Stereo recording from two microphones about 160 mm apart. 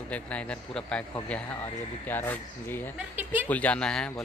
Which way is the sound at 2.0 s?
10° left (ahead or behind).